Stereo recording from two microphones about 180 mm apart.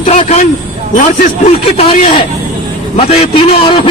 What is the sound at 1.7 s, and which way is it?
A man's voice, 30° left (ahead or behind).